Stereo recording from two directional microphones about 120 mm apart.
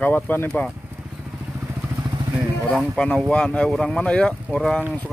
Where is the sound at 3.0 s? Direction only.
5° left (ahead or behind).